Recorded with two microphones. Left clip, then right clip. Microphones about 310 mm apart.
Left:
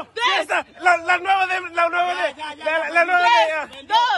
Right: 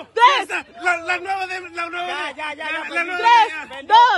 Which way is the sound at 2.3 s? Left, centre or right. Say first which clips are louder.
Right 4 dB; centre.